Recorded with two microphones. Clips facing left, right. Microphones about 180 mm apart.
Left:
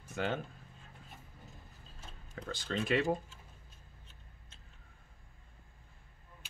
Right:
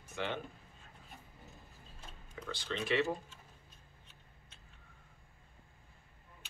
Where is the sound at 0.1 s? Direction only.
45° left (ahead or behind).